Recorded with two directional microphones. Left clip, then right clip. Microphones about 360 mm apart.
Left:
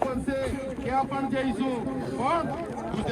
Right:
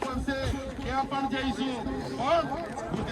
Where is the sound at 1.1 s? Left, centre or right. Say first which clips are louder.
Left 1 dB; centre.